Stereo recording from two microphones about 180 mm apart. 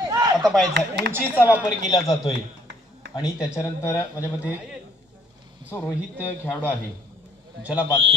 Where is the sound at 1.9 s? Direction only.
20° left (ahead or behind).